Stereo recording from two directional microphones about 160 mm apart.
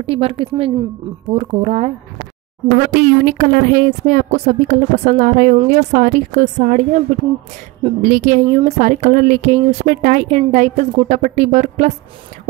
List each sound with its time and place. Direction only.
0.0 s a woman's voice: 35° right (ahead or behind)
2.9 s a woman's voice: 50° right (ahead or behind)
7.8 s a woman's voice: 50° right (ahead or behind)